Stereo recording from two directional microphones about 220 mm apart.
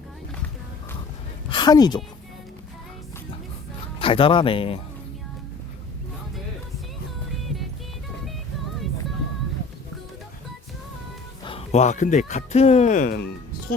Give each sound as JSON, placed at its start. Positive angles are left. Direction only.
{"t": 1.5, "sound": "speech", "side_deg": 20}
{"t": 4.0, "sound": "speech", "side_deg": 25}
{"t": 7.4, "sound": "music", "side_deg": 0}
{"t": 11.4, "sound": "speech", "side_deg": 30}